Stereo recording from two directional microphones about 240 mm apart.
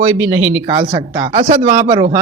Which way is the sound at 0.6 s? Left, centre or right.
Right.